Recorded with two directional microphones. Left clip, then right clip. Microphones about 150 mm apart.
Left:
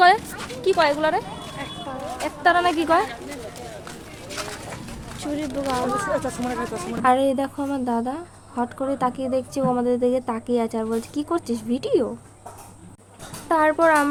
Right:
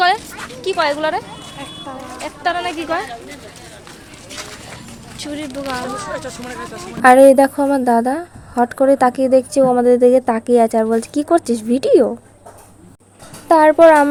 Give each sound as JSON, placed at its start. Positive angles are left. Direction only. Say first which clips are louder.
{"t": 0.6, "sound": "speech", "louder": "right 2 dB", "side_deg": 0}
{"t": 2.4, "sound": "a woman's voice", "louder": "left 2 dB", "side_deg": 30}
{"t": 5.2, "sound": "speech", "louder": "right 1 dB", "side_deg": 5}
{"t": 6.1, "sound": "speech", "louder": "left 2 dB", "side_deg": 90}
{"t": 7.0, "sound": "a woman's voice", "louder": "right 12 dB", "side_deg": -40}
{"t": 13.5, "sound": "a woman's voice", "louder": "right 9 dB", "side_deg": -35}